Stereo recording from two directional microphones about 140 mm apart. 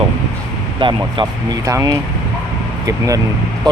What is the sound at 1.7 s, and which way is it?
Speech, 25° right (ahead or behind).